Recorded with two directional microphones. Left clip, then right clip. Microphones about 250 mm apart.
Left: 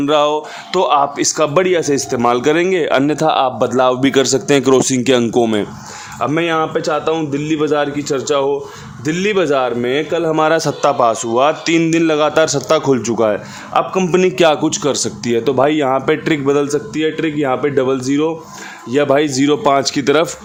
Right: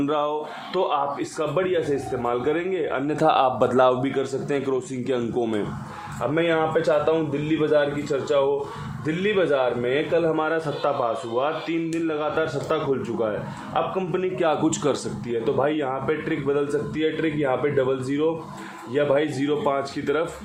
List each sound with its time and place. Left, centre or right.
0.0 s speech: left
0.7 s a man's voice: left
3.2 s speech: left
6.1 s a man's voice: left
14.6 s speech: left
15.2 s a man's voice: left